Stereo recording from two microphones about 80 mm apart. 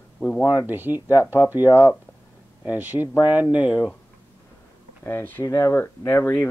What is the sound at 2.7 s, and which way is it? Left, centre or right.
Speech, right.